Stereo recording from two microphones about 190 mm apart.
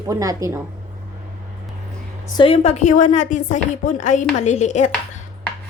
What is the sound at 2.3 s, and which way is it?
Speech, 30° left (ahead or behind).